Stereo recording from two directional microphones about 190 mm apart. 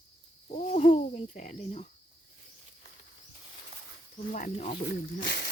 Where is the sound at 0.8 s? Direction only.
35° left (ahead or behind).